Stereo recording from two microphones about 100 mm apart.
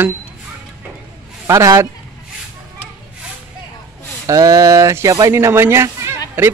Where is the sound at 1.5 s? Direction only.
30° right (ahead or behind).